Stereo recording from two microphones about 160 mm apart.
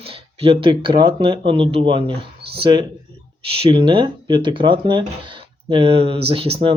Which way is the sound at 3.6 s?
30° right (ahead or behind).